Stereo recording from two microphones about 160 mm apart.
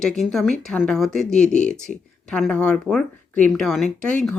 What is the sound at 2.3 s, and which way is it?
Speech, 5° left (ahead or behind).